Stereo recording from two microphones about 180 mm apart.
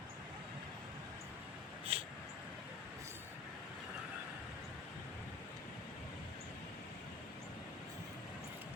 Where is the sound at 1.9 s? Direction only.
35° right (ahead or behind).